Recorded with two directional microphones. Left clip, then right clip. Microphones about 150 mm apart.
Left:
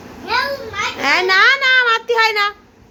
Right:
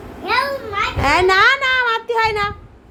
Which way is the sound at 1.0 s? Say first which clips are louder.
Left 1 dB; 10° right (ahead or behind).